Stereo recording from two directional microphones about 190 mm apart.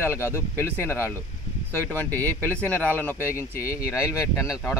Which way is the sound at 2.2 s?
10° left (ahead or behind).